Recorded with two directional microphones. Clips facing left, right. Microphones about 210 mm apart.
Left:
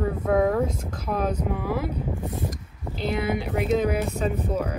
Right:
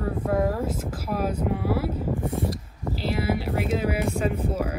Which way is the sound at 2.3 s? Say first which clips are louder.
Right 4 dB; 30° right (ahead or behind).